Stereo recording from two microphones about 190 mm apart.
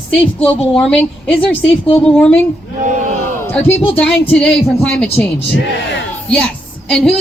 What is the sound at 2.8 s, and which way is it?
Battle cry, 40° right (ahead or behind).